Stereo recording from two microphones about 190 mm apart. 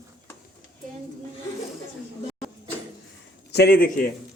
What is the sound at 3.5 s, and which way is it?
Speech, 55° left (ahead or behind).